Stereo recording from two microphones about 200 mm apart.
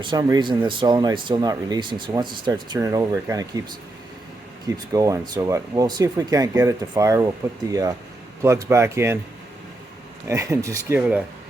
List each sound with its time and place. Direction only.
0.0 s speech: 20° right (ahead or behind)
4.9 s speech: 15° right (ahead or behind)
10.2 s speech: 15° right (ahead or behind)